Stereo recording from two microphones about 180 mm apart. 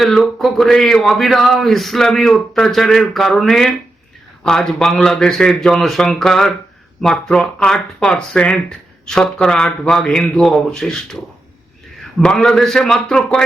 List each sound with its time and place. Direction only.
0.0 s speech: centre (ahead or behind)
12.2 s speech: 5° left (ahead or behind)